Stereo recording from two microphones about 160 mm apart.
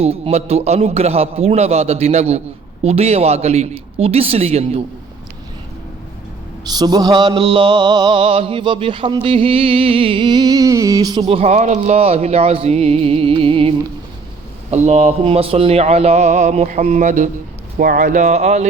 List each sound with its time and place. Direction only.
0.0 s speech: 40° right (ahead or behind)
6.7 s music: 25° right (ahead or behind)
11.3 s speech: 40° right (ahead or behind)
14.7 s speech: 45° right (ahead or behind)
17.7 s speech: 65° right (ahead or behind); by 18.6 s 45° right (ahead or behind)